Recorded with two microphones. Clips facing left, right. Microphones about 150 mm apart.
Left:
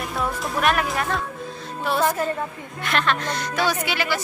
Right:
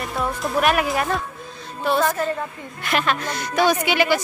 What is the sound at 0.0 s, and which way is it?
Speech, centre (ahead or behind).